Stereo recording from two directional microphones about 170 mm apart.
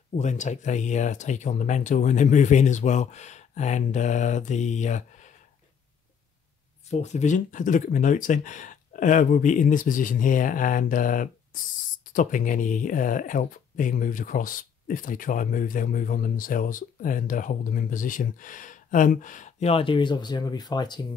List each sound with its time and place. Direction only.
0.1 s speech: 45° left (ahead or behind)
6.9 s speech: 40° left (ahead or behind); by 21.1 s 25° left (ahead or behind)